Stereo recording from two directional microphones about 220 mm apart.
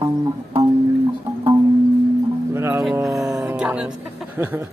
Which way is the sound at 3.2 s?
Centre (ahead or behind).